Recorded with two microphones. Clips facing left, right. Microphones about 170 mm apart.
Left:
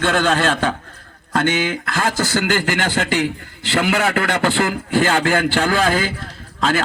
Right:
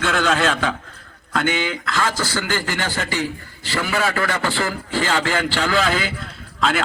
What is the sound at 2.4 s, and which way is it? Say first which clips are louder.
A man's voice: left 5 dB; 70° left (ahead or behind).